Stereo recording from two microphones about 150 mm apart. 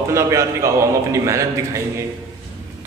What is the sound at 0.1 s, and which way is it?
A man's voice, 20° right (ahead or behind).